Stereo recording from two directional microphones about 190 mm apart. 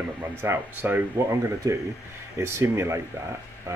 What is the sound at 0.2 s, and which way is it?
Speech, 10° right (ahead or behind).